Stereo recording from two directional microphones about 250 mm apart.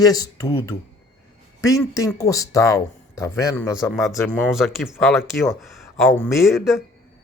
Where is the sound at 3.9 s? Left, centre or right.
Centre.